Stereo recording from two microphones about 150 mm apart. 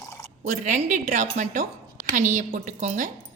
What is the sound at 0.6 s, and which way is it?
A woman's voice, 55° right (ahead or behind).